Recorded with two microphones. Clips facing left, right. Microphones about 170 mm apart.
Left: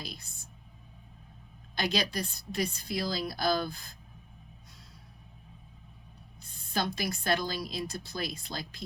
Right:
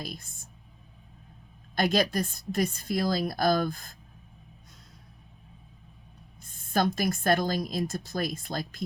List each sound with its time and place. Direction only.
0.0 s speech: 50° right (ahead or behind)
1.7 s speech: 50° right (ahead or behind)
6.4 s speech: 50° right (ahead or behind)